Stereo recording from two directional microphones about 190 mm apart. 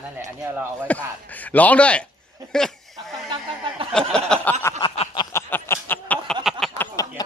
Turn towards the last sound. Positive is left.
turn(degrees=15)  # may be behind; listen again after turning